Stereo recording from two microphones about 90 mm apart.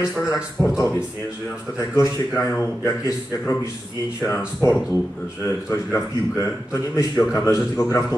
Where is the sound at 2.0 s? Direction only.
30° left (ahead or behind).